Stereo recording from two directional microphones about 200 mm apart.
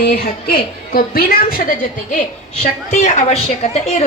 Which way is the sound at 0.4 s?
50° left (ahead or behind).